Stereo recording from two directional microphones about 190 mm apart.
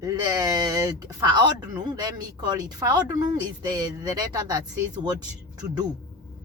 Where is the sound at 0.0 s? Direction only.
20° right (ahead or behind).